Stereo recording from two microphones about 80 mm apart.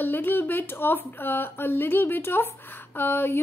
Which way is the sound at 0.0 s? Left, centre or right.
Left.